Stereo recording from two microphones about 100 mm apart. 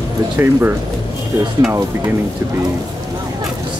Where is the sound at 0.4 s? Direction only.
20° right (ahead or behind).